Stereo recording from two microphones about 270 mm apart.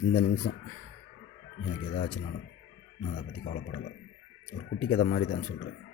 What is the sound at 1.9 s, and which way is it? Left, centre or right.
Speech, left.